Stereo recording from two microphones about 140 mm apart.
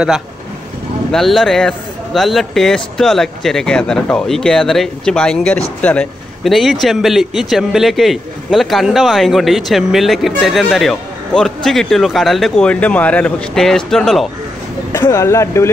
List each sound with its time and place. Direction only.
1.1 s a man's voice: centre (ahead or behind)
14.9 s speech: 20° left (ahead or behind)